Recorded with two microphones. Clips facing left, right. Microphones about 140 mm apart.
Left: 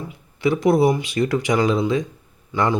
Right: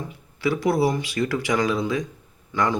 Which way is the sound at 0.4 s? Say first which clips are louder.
Left 5 dB; 20° left (ahead or behind).